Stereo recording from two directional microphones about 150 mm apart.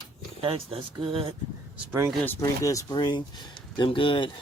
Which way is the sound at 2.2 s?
20° left (ahead or behind).